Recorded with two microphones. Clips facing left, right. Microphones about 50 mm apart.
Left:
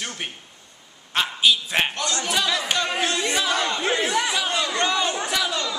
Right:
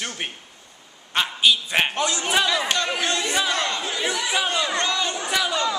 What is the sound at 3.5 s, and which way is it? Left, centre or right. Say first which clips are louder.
Speech: left 1 dB; centre.